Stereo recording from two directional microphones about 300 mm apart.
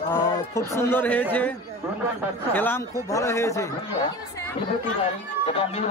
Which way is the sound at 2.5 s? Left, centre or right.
Centre.